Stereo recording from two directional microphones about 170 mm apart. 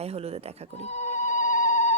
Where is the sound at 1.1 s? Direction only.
45° left (ahead or behind).